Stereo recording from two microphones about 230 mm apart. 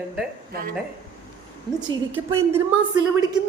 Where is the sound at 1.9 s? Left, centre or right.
Centre.